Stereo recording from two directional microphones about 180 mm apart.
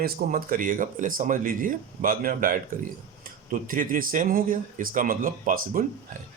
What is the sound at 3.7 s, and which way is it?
Speech, 50° right (ahead or behind).